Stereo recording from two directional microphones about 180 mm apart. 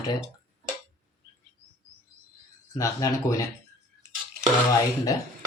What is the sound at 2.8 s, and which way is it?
Speech, 20° left (ahead or behind).